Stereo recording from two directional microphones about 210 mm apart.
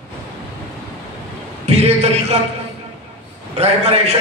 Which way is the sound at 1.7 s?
30° right (ahead or behind).